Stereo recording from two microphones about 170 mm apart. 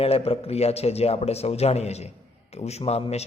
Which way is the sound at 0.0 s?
35° left (ahead or behind).